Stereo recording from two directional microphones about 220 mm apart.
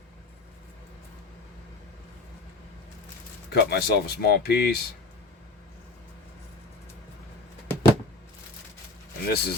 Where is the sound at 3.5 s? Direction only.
45° left (ahead or behind).